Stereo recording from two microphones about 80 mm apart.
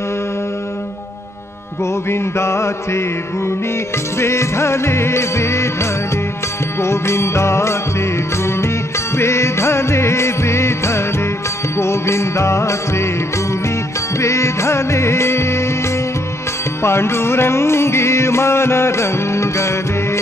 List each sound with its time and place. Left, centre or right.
2.0 s music: left